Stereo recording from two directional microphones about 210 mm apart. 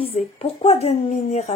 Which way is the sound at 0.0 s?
25° left (ahead or behind).